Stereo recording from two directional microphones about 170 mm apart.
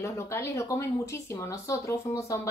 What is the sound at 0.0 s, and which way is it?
Speech, 15° left (ahead or behind).